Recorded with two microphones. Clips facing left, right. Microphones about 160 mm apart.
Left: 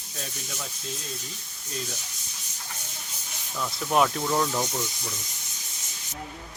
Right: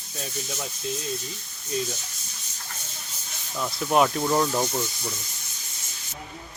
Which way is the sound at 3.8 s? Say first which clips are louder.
Right 2 dB; 5° right (ahead or behind).